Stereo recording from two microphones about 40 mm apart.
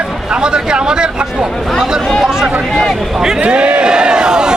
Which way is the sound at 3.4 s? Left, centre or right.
Right.